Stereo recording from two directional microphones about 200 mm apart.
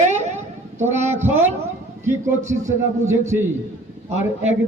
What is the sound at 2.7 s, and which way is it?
Speech, 15° right (ahead or behind).